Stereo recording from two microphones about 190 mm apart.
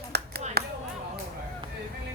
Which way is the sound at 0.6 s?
55° right (ahead or behind).